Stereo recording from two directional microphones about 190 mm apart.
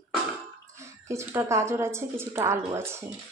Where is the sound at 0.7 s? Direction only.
15° right (ahead or behind).